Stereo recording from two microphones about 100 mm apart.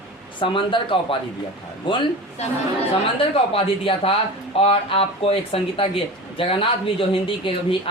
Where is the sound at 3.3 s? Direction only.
70° left (ahead or behind).